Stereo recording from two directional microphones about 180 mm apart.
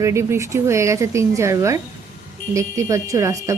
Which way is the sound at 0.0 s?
15° right (ahead or behind).